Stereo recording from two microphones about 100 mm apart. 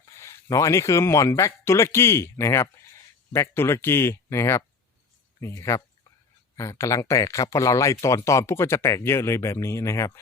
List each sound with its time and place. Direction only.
0.0 s speech: 30° left (ahead or behind)